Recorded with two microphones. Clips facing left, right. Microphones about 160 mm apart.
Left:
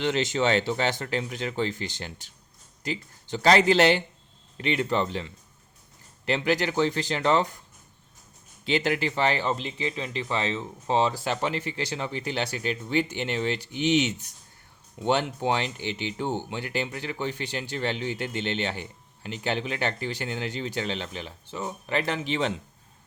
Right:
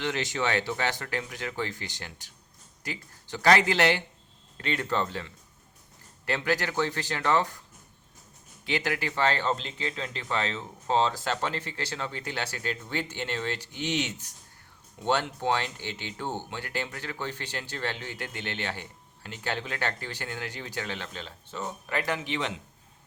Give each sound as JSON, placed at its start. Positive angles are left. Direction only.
{"t": 0.0, "sound": "speech", "side_deg": 25}
{"t": 8.6, "sound": "speech", "side_deg": 25}